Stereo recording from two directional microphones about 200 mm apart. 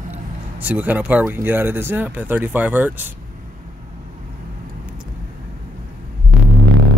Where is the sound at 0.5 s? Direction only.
10° right (ahead or behind).